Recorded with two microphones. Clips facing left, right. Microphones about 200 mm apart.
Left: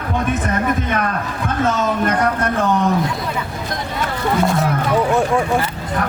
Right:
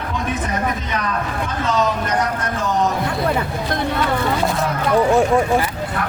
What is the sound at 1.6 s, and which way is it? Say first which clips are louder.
Speech: left 2 dB; 55° left (ahead or behind).